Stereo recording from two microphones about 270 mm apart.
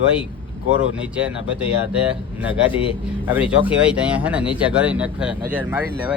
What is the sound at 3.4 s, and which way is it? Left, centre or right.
A man's voice, centre.